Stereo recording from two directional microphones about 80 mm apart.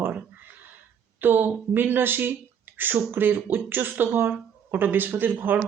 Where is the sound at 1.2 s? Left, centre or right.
Right.